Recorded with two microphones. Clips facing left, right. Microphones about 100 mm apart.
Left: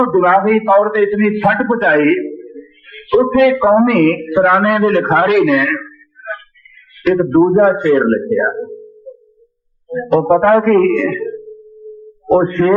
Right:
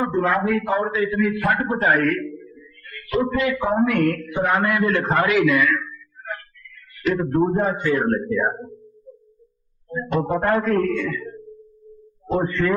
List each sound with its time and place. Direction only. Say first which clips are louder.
0.0 s a man's voice: left 10 dB; 85° left; by 3.1 s 50° left (ahead or behind)
3.1 s a man's voice: left 11 dB; 75° left (ahead or behind); by 5.8 s 90° left
7.0 s a man's voice: left 9 dB; 55° left (ahead or behind)
8.3 s speech: left 7 dB; 45° left (ahead or behind)
9.1 s music: left 10 dB; 20° left (ahead or behind)
10.4 s a man's voice: left 10 dB; 90° left
12.3 s a man's voice: left 10 dB; 55° left (ahead or behind)